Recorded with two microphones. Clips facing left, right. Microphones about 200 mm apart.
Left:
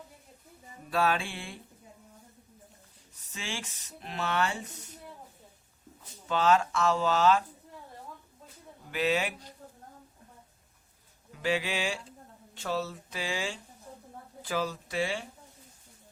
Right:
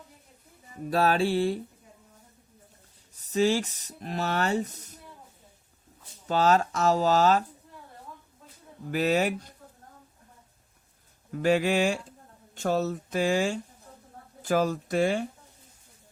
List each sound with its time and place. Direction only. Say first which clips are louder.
0.9 s speech: right 5 dB; 40° right (ahead or behind)
3.3 s speech: right 16 dB; 40° right (ahead or behind)
6.2 s speech: right 2 dB; 40° right (ahead or behind)
8.9 s speech: right 5 dB; 40° right (ahead or behind)
11.3 s speech: right 7 dB; 50° right (ahead or behind)